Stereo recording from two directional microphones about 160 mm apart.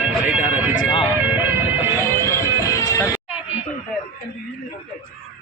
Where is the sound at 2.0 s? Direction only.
20° left (ahead or behind).